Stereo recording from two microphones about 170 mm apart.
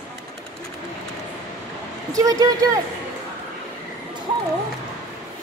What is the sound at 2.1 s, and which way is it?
Speech, 20° right (ahead or behind).